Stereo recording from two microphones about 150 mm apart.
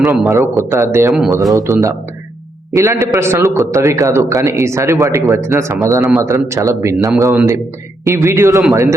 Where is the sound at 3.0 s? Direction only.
15° right (ahead or behind).